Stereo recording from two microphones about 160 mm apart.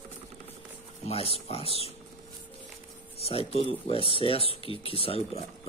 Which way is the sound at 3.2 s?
40° left (ahead or behind).